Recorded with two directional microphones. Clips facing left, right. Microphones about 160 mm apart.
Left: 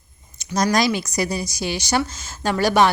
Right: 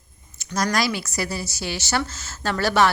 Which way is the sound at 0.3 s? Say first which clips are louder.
Left 4 dB; 20° left (ahead or behind).